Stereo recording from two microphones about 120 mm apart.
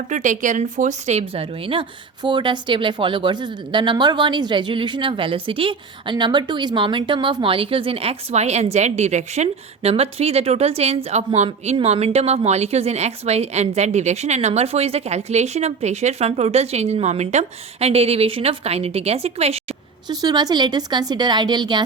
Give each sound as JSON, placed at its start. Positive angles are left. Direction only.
{"t": 0.1, "sound": "speech", "side_deg": -90}
{"t": 1.3, "sound": "speech", "side_deg": -50}
{"t": 9.9, "sound": "speech", "side_deg": -55}
{"t": 20.1, "sound": "a woman's voice", "side_deg": -35}